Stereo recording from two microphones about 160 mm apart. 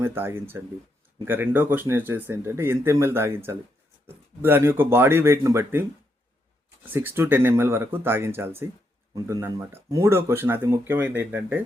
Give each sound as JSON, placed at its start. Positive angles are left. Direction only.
{"t": 0.0, "sound": "speech", "side_deg": -15}
{"t": 6.9, "sound": "speech", "side_deg": -15}